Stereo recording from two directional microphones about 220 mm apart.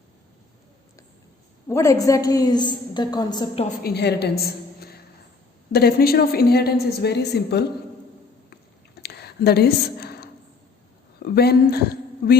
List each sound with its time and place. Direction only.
1.6 s a woman's voice: 15° left (ahead or behind)
3.8 s a woman's voice: 50° left (ahead or behind)
9.0 s a sound: 45° left (ahead or behind)
11.3 s speech: 45° left (ahead or behind)